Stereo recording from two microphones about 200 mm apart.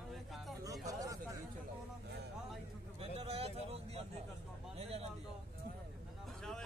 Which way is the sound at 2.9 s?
30° right (ahead or behind).